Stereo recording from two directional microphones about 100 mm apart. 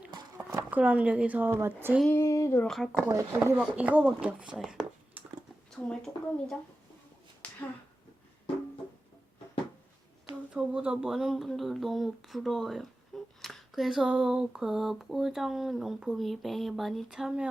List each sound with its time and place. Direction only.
0.7 s speech: 15° right (ahead or behind)
2.0 s female singing: 25° left (ahead or behind)
2.6 s speech: 5° left (ahead or behind)
3.1 s speech: 30° right (ahead or behind)
3.8 s speech: 15° right (ahead or behind)
5.7 s speech: 5° left (ahead or behind)
7.4 s a sound: 10° left (ahead or behind)
10.2 s speech: 10° right (ahead or behind)